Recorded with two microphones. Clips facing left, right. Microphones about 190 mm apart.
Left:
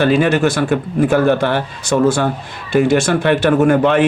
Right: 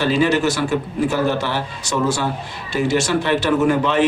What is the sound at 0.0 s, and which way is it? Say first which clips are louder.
A man's voice: left 4 dB; 55° left (ahead or behind).